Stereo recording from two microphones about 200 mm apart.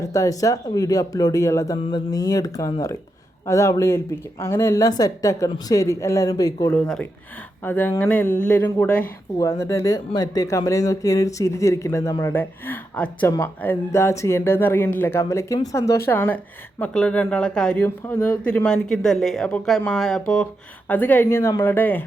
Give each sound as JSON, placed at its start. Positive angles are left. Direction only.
{"t": 0.0, "sound": "speech", "side_deg": 15}